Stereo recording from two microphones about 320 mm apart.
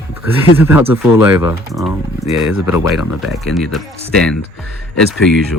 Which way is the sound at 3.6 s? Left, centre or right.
Centre.